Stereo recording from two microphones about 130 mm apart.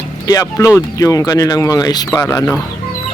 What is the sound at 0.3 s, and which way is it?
Speech, 25° left (ahead or behind).